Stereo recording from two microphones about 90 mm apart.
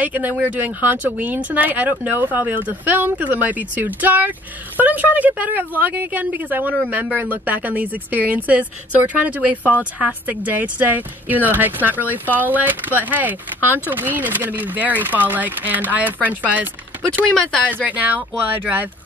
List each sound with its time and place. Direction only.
0.0 s speech: 20° right (ahead or behind)
17.3 s speech: 10° left (ahead or behind)
17.8 s speech: 15° right (ahead or behind)